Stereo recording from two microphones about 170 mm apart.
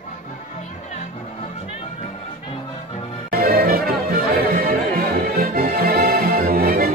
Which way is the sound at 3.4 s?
60° right (ahead or behind).